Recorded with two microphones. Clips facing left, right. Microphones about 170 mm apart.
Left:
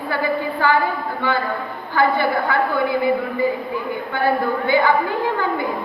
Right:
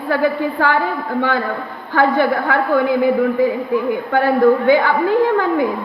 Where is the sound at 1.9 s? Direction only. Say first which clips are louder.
Right 3 dB; 85° right.